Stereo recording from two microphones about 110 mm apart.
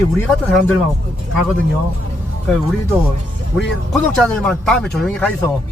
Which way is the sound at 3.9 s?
5° left (ahead or behind).